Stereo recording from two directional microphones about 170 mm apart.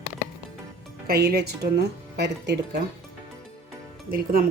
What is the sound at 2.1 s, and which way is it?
Speech, 75° right (ahead or behind).